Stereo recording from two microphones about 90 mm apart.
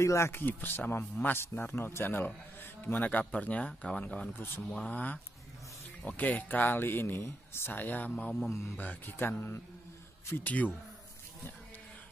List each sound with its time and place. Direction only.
0.0 s a man's voice: 30° left (ahead or behind)
8.5 s a man's voice: 30° left (ahead or behind)